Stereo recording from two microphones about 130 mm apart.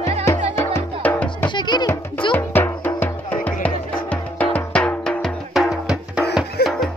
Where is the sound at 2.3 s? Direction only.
15° left (ahead or behind).